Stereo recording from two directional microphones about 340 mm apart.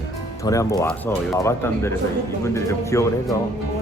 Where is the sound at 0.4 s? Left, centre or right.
Centre.